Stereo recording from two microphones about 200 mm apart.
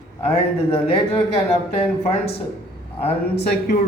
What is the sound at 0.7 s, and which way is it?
Speech, 30° left (ahead or behind).